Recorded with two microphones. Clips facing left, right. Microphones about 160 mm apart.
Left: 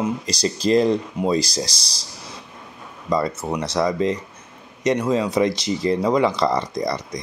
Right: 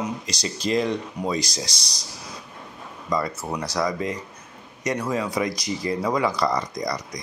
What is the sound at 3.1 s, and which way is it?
Speech, 25° left (ahead or behind).